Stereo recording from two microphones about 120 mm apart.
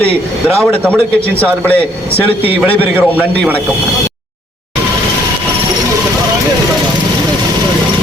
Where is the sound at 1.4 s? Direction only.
10° left (ahead or behind).